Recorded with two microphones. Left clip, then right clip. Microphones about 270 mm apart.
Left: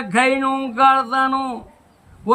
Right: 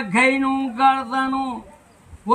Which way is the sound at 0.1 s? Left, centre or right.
Centre.